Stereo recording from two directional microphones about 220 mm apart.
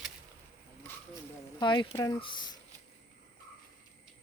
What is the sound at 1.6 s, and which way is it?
Speech, 20° left (ahead or behind).